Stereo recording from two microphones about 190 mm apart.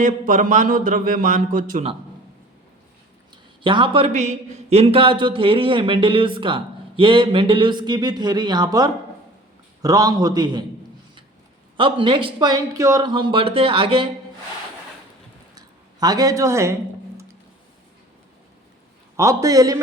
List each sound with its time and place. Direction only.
0.0 s a man's voice: 40° right (ahead or behind)
3.6 s a man's voice: 25° right (ahead or behind)
11.8 s a man's voice: 25° right (ahead or behind)
15.5 s a sound: 20° right (ahead or behind)
19.1 s a man's voice: 15° right (ahead or behind)